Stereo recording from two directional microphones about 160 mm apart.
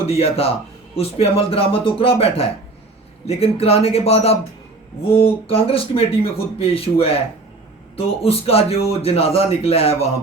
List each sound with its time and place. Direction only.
0.1 s a man's voice: 40° left (ahead or behind)